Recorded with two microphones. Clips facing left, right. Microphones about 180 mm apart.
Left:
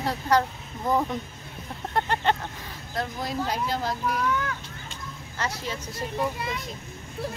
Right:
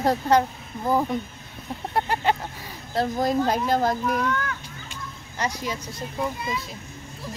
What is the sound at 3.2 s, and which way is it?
Speech, 50° right (ahead or behind).